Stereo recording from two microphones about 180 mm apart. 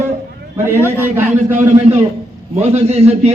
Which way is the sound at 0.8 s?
15° left (ahead or behind).